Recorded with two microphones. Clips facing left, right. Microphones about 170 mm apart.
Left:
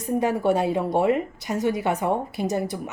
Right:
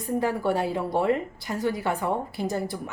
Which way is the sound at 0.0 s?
20° left (ahead or behind).